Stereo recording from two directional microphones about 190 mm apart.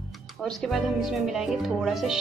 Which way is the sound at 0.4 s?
Centre (ahead or behind).